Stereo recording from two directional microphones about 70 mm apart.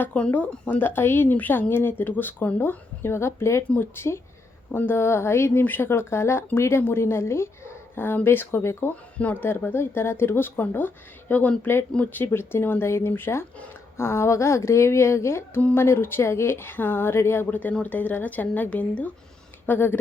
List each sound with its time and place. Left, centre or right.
0.0 s a woman's voice: centre; by 8.9 s left
9.1 s a woman's voice: left
19.6 s speech: left